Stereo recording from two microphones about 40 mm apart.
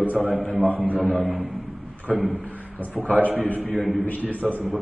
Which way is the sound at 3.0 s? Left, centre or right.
Centre.